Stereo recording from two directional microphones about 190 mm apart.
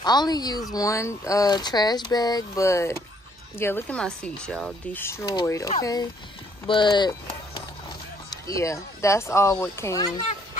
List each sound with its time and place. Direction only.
0.0 s speech: 20° left (ahead or behind)
8.3 s speech: 15° left (ahead or behind)